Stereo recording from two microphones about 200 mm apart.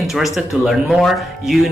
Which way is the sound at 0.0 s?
Centre (ahead or behind).